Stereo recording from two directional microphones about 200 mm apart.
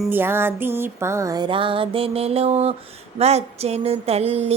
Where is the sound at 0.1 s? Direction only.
10° right (ahead or behind).